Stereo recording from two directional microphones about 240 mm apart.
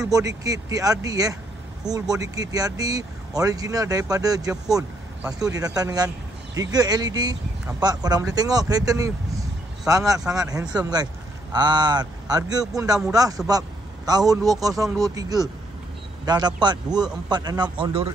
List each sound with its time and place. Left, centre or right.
0.0 s speech: centre
10.5 s a man's voice: centre